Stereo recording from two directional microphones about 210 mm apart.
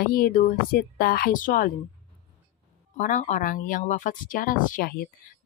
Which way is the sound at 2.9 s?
35° left (ahead or behind).